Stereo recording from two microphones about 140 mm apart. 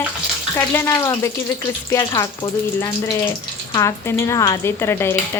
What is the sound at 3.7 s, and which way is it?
Speech, 20° left (ahead or behind).